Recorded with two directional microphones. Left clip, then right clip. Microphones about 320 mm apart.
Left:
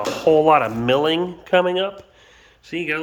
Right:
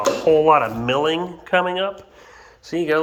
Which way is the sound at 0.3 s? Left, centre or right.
Centre.